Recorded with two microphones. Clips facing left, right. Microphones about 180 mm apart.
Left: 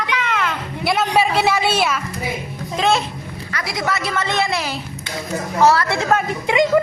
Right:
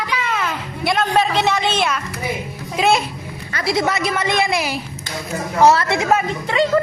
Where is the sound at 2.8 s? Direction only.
10° right (ahead or behind).